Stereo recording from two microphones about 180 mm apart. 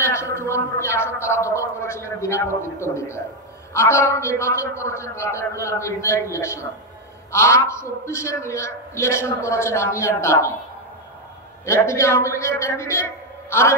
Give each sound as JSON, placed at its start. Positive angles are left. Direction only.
{"t": 0.0, "sound": "a man's voice", "side_deg": 15}
{"t": 11.6, "sound": "a man's voice", "side_deg": 15}